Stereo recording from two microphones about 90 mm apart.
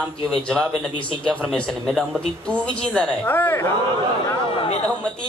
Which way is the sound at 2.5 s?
15° left (ahead or behind).